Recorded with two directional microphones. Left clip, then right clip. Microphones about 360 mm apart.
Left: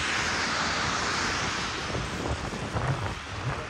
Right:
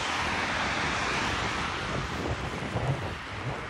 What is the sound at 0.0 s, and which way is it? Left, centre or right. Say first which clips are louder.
Vehicle: left 1 dB; centre.